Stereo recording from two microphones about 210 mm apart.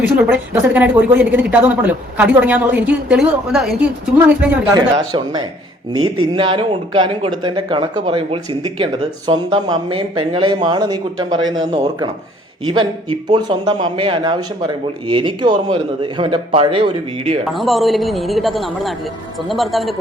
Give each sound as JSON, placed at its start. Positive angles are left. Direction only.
{"t": 0.0, "sound": "speech", "side_deg": -10}
{"t": 17.5, "sound": "a man's voice", "side_deg": 0}